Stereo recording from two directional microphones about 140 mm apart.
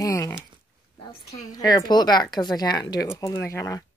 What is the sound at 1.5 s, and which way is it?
Speech, 25° left (ahead or behind).